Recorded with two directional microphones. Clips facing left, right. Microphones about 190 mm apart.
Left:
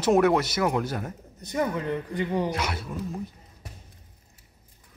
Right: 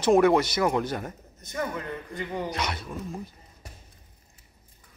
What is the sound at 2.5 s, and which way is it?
Speech, 5° left (ahead or behind).